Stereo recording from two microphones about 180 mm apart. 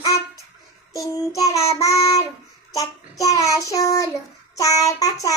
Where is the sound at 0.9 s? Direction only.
20° left (ahead or behind).